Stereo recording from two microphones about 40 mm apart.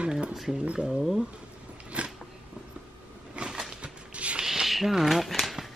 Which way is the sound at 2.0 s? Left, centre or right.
Right.